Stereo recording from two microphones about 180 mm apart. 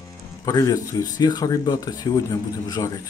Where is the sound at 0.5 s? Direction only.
20° left (ahead or behind).